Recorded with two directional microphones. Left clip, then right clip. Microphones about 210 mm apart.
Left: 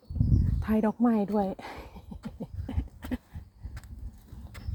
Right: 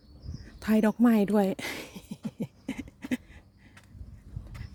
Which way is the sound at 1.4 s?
50° right (ahead or behind).